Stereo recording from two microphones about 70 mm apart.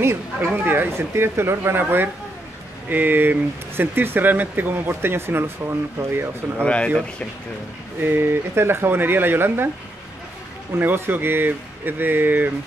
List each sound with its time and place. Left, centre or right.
0.0 s speech: right
5.6 s speech: right
6.6 s speech: centre
8.0 s speech: right
10.8 s speech: right